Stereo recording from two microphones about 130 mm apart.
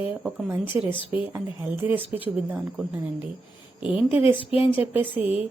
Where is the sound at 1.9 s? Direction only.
45° left (ahead or behind).